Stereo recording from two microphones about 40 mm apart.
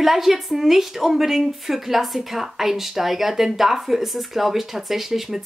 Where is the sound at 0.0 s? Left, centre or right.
Centre.